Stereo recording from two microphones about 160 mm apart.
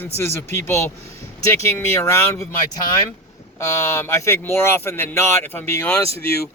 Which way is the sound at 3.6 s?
15° left (ahead or behind).